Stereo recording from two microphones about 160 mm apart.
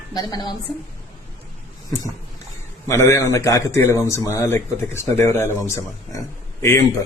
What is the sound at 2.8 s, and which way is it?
Speech, 15° left (ahead or behind).